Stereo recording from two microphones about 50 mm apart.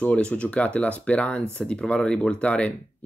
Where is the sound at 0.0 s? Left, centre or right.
Left.